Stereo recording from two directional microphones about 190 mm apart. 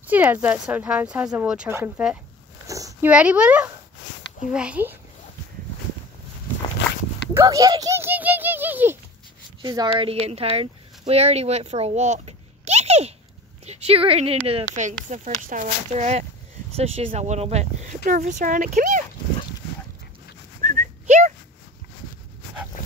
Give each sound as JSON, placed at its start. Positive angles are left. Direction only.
{"t": 0.0, "sound": "speech", "side_deg": -10}
{"t": 2.6, "sound": "a sound", "side_deg": -15}
{"t": 3.1, "sound": "speech", "side_deg": -5}
{"t": 6.8, "sound": "dog", "side_deg": 70}
{"t": 7.3, "sound": "speech", "side_deg": -15}
{"t": 9.6, "sound": "speech", "side_deg": -25}
{"t": 20.6, "sound": "dog", "side_deg": -40}